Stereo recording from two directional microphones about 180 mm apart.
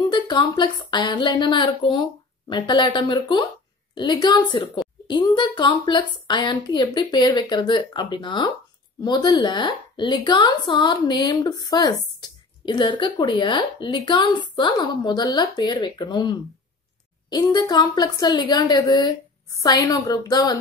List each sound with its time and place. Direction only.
0.0 s a woman's voice: 25° left (ahead or behind)